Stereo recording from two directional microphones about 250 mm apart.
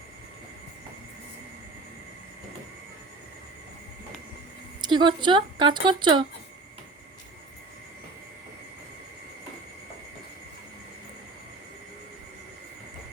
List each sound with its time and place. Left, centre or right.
4.8 s speech: centre